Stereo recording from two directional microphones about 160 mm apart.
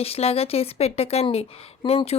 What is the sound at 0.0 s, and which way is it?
A woman's voice, 40° left (ahead or behind).